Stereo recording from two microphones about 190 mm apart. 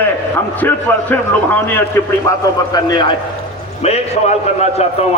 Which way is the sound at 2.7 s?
25° left (ahead or behind).